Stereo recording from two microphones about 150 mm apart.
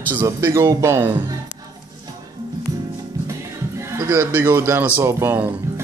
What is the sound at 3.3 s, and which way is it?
Music, 20° right (ahead or behind).